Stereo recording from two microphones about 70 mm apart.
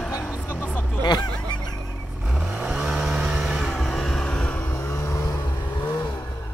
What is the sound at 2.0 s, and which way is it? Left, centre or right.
Vehicle, centre.